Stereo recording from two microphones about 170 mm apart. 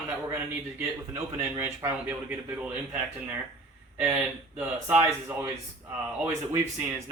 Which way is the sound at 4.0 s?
10° right (ahead or behind).